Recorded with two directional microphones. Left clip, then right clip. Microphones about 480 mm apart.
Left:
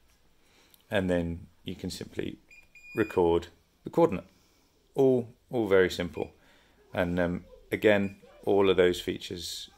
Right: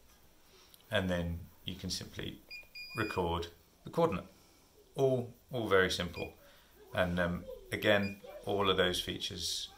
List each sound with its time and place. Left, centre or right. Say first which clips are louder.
0.8 s speech: left 6 dB; centre